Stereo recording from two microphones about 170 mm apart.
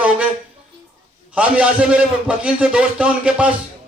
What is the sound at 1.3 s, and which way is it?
A man's voice, 5° right (ahead or behind).